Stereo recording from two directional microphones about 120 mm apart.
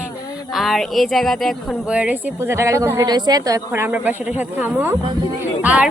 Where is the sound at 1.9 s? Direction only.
10° right (ahead or behind).